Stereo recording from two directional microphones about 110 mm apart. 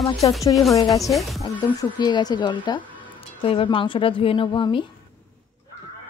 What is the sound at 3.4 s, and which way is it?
A woman's voice, 55° left (ahead or behind).